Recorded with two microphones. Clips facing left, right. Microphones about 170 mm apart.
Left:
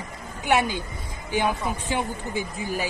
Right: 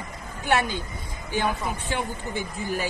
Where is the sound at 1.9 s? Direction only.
10° left (ahead or behind).